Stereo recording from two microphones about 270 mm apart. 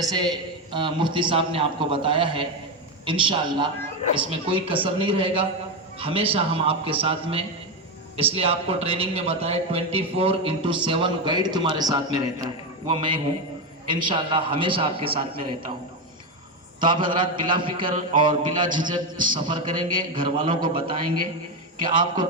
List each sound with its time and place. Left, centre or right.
0.0 s a man's voice: centre
16.8 s a man's voice: centre